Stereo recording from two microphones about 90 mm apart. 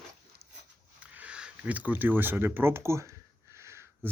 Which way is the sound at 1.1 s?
15° right (ahead or behind).